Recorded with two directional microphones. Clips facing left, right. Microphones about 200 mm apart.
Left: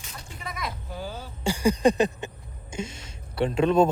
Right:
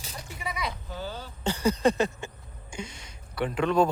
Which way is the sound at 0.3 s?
Centre (ahead or behind).